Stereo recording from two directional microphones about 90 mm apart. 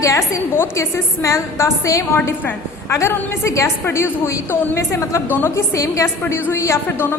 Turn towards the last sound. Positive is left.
turn(degrees=30)  # may be behind; listen again after turning